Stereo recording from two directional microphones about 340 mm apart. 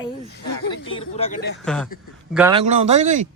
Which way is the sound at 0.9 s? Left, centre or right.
Centre.